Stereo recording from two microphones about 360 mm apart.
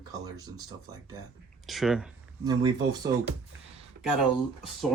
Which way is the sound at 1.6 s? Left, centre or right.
Centre.